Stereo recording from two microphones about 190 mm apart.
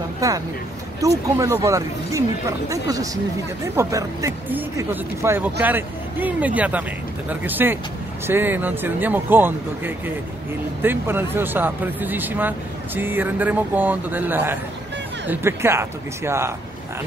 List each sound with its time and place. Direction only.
0.2 s speech: 15° right (ahead or behind)